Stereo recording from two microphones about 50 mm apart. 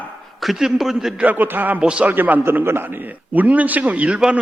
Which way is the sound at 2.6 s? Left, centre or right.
Right.